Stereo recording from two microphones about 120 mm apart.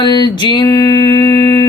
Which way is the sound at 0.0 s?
40° left (ahead or behind).